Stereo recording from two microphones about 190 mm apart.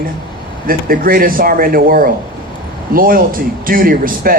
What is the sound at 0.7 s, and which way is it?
A man's voice, 50° right (ahead or behind).